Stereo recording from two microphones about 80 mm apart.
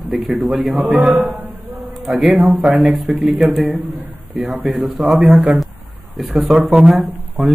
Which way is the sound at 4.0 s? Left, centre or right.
Right.